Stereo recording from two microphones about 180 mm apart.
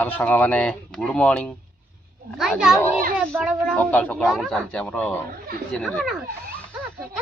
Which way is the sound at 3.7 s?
10° left (ahead or behind).